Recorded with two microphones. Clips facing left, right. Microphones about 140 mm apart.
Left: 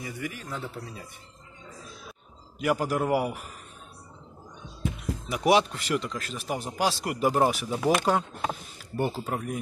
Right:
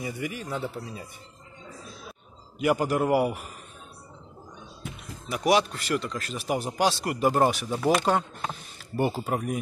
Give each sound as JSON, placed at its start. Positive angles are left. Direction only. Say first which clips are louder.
{"t": 0.0, "sound": "speech", "louder": "right 3 dB", "side_deg": -15}
{"t": 2.6, "sound": "speech", "louder": "right 2 dB", "side_deg": 0}
{"t": 5.3, "sound": "a man's voice", "louder": "even", "side_deg": 25}
{"t": 6.1, "sound": "speech", "louder": "right 3 dB", "side_deg": 0}